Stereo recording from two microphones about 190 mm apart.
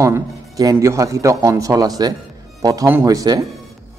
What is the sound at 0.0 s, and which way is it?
A man's voice, 15° right (ahead or behind).